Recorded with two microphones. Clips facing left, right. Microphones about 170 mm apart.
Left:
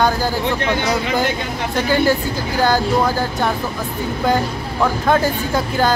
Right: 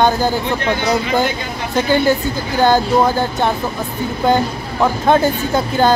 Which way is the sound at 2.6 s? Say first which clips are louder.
Right 3 dB; 25° right (ahead or behind).